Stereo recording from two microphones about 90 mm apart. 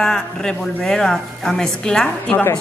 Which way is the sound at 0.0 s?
5° left (ahead or behind).